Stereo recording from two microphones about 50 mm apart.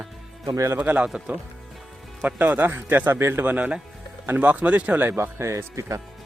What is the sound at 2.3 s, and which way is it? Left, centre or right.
Speech, right.